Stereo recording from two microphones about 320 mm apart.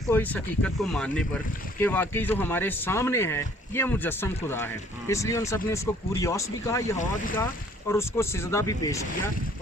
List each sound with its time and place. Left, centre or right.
0.1 s speech: centre
6.9 s speech: left
7.9 s speech: centre